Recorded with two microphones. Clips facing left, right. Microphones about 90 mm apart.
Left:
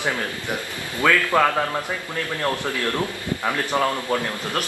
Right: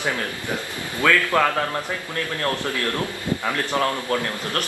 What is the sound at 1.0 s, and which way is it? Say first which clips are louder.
A man's voice: left 1 dB; 10° left (ahead or behind).